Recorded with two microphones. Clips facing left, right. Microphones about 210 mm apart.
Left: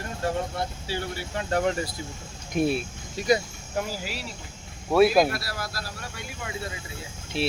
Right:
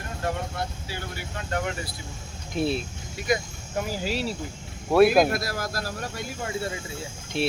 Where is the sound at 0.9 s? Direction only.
30° left (ahead or behind).